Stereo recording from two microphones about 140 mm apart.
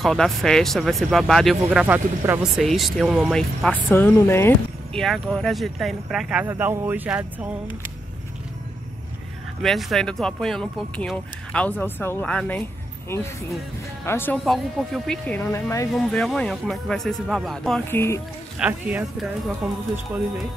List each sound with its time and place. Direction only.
0.0 s speech: centre (ahead or behind)
3.9 s speech: 15° left (ahead or behind)
4.9 s speech: 5° left (ahead or behind)
6.4 s speech: 20° right (ahead or behind)
9.6 s speech: centre (ahead or behind); by 14.4 s 15° left (ahead or behind)
14.4 s speech: centre (ahead or behind)
15.5 s speech: 20° left (ahead or behind)
15.9 s speech: 5° left (ahead or behind)
17.8 s speech: 20° left (ahead or behind)
18.6 s speech: 10° right (ahead or behind)